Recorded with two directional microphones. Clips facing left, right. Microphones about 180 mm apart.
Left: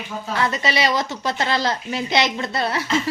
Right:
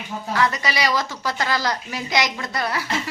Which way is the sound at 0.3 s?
25° left (ahead or behind).